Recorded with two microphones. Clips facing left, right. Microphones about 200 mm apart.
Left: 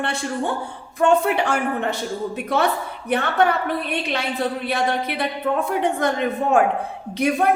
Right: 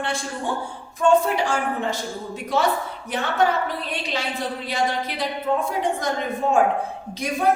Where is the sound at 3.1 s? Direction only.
60° left (ahead or behind).